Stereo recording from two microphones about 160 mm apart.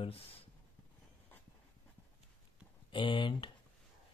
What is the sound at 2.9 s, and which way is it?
Speech, 30° left (ahead or behind).